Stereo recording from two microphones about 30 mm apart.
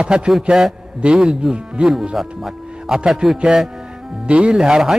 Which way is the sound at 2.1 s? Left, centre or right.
Centre.